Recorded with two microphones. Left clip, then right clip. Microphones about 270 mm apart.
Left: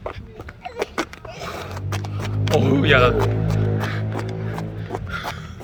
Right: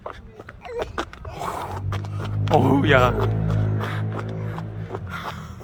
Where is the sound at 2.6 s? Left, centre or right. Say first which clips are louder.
Left 1 dB; centre.